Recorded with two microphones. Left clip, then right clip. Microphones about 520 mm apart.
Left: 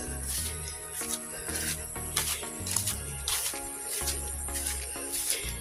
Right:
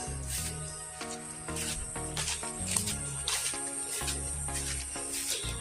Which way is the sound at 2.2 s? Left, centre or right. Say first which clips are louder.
Left 4 dB; left.